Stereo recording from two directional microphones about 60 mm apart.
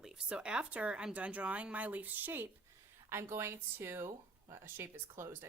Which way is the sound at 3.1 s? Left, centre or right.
Right.